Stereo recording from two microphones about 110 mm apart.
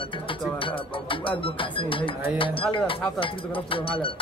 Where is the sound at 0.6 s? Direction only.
50° left (ahead or behind).